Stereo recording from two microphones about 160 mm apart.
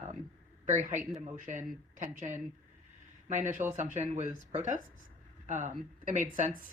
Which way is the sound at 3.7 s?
50° right (ahead or behind).